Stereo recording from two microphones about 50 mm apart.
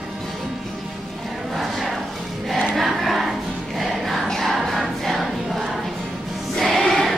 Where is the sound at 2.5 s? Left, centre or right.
Centre.